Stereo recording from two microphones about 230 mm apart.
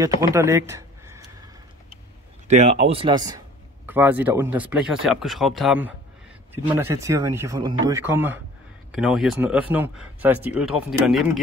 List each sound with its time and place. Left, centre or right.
0.2 s speech: centre
2.4 s speech: right; by 11.4 s centre